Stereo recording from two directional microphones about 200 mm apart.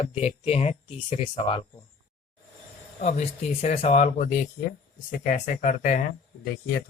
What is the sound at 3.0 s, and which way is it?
Speech, 35° left (ahead or behind).